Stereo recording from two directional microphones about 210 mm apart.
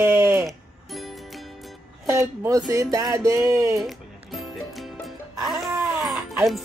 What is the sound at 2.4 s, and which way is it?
Music, 15° right (ahead or behind).